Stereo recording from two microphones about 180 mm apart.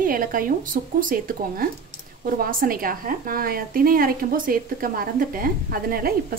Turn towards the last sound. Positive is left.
turn(degrees=-55)  # may be behind; listen again after turning